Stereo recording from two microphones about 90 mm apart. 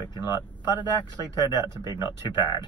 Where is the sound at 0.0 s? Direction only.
55° left (ahead or behind).